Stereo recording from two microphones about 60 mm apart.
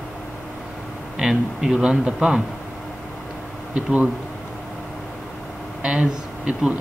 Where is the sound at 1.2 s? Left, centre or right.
Centre.